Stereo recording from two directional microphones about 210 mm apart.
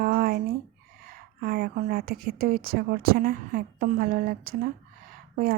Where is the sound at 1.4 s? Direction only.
45° right (ahead or behind).